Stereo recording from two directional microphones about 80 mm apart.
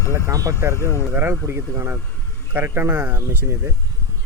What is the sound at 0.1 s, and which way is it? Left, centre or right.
Speech, right.